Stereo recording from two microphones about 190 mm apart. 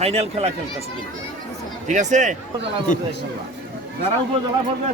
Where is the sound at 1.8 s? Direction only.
40° right (ahead or behind).